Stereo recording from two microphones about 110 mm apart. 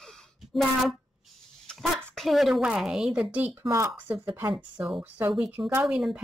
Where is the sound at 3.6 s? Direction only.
25° right (ahead or behind).